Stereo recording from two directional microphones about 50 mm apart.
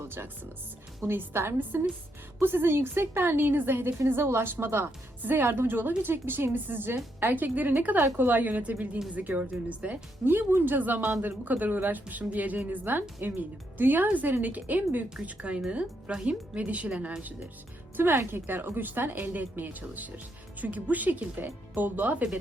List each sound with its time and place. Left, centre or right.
0.0 s a woman's voice: right
3.9 s a woman's voice: right
10.2 s speech: right
18.2 s a woman's voice: right